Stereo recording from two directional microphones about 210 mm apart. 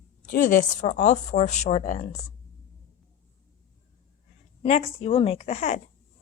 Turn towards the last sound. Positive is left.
turn(degrees=30)  # may be behind; listen again after turning